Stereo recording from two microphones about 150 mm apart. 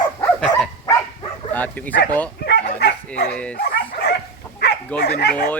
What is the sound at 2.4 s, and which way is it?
Dog, 90° left.